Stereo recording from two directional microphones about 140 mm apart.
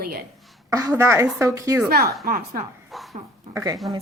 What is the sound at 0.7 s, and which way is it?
A woman's voice, 20° right (ahead or behind).